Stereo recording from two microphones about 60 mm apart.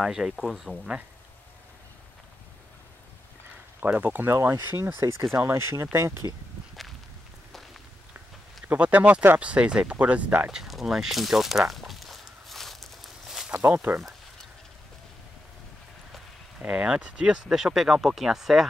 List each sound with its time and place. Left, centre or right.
0.0 s speech: centre
3.8 s speech: right
4.3 s speech: right
8.7 s speech: right
9.4 s speech: centre
10.5 s a sound: centre
13.5 s speech: right
16.6 s speech: centre